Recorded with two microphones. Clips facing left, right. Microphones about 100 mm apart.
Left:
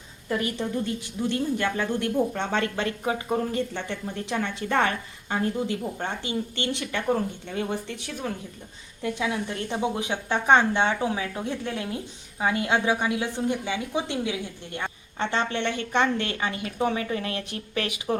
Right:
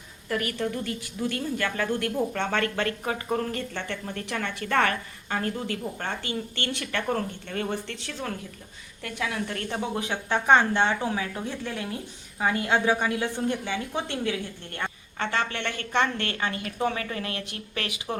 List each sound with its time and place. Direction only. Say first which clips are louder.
0.3 s a woman's voice: left 1 dB; 20° left (ahead or behind)